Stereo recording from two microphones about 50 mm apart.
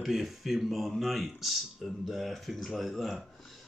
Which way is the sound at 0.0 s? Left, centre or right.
Centre.